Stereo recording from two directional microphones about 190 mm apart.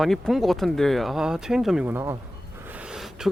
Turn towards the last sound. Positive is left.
turn(degrees=-5)  # may be behind; listen again after turning